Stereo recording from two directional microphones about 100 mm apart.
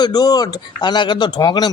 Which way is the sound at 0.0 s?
40° left (ahead or behind).